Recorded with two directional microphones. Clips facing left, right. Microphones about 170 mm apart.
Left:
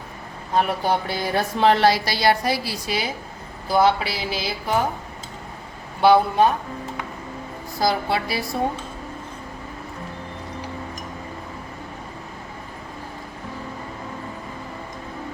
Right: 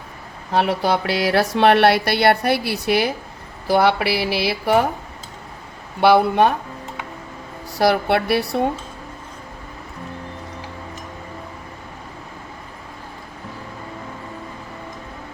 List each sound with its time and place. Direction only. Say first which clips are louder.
0.5 s speech: right 2 dB; 80° right
6.0 s speech: right 2 dB; 70° right (ahead or behind)
7.8 s speech: right 5 dB; 65° right (ahead or behind)